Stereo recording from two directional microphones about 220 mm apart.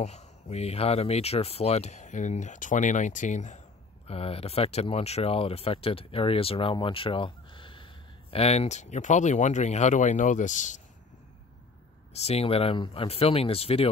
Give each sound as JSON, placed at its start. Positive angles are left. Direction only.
{"t": 0.0, "sound": "speech", "side_deg": 30}
{"t": 12.1, "sound": "speech", "side_deg": 30}